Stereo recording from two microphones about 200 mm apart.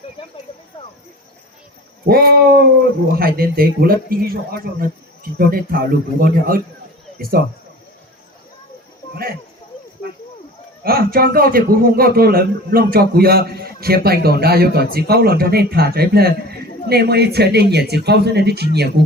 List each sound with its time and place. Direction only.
2.0 s a man's voice: 50° right (ahead or behind)
10.8 s a man's voice: 50° right (ahead or behind)